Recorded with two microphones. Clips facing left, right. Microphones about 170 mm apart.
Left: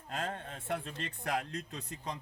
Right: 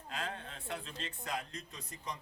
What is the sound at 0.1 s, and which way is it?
Speech, 45° left (ahead or behind).